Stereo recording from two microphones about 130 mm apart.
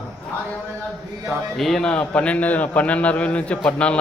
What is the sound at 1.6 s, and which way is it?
A man's voice, 5° left (ahead or behind).